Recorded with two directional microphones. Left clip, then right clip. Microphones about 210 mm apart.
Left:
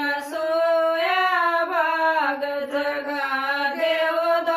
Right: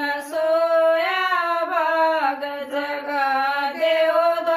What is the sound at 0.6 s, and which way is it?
Female singing, 20° right (ahead or behind).